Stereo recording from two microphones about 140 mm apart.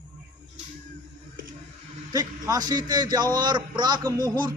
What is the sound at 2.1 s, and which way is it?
A man's voice, 25° right (ahead or behind).